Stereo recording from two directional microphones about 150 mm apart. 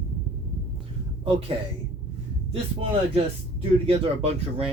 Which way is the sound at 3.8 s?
40° right (ahead or behind).